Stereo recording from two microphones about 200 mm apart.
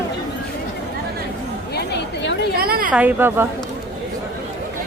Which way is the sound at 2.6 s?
45° right (ahead or behind).